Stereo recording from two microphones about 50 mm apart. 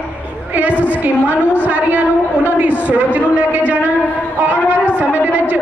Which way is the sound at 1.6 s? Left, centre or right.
Right.